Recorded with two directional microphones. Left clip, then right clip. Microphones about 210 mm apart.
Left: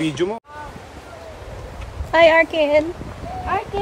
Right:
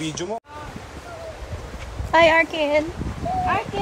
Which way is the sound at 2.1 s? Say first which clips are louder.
Left 3 dB; 20° left (ahead or behind).